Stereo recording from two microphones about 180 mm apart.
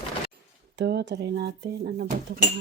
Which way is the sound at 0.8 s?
75° right (ahead or behind).